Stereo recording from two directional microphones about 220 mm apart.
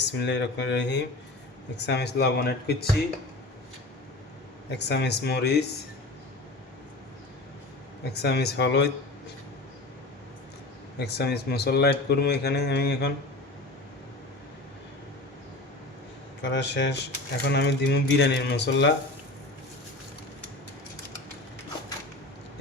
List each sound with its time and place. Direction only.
0.0 s speech: 50° left (ahead or behind)
4.8 s speech: 50° left (ahead or behind)
8.1 s speech: 50° left (ahead or behind)
11.0 s speech: 50° left (ahead or behind)
16.4 s speech: 50° left (ahead or behind)